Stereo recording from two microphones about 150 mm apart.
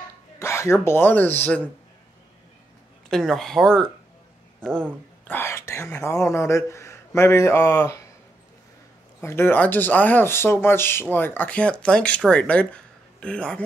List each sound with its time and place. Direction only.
0.4 s speech: 20° left (ahead or behind)
3.1 s speech: centre (ahead or behind)
5.2 s speech: 15° left (ahead or behind)
9.2 s speech: 15° left (ahead or behind)